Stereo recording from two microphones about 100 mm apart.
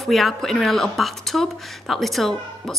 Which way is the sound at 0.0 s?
Centre (ahead or behind).